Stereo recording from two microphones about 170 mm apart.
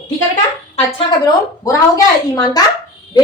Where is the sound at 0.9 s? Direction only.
20° left (ahead or behind).